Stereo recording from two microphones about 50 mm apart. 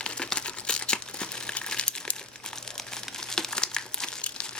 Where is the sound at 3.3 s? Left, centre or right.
Centre.